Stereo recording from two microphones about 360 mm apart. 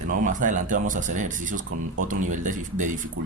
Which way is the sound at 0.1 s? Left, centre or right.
Right.